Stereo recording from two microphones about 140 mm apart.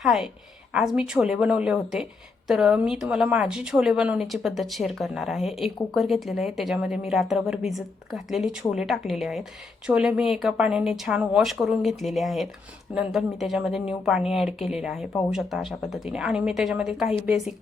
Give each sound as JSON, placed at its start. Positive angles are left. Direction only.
{"t": 0.0, "sound": "a woman's voice", "side_deg": 0}